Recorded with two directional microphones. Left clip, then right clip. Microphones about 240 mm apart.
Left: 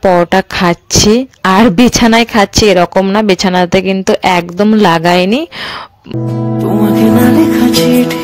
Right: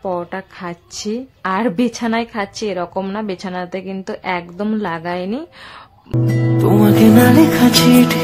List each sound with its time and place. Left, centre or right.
0.0 s a woman's voice: left
6.6 s music: centre